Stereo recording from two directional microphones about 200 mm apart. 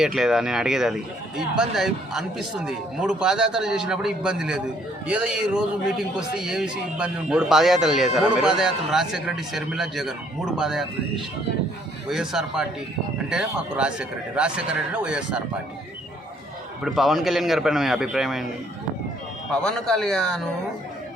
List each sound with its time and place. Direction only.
0.0 s a man's voice: centre (ahead or behind)
12.0 s a man's voice: centre (ahead or behind)
16.8 s a man's voice: centre (ahead or behind)
19.5 s a man's voice: 5° left (ahead or behind)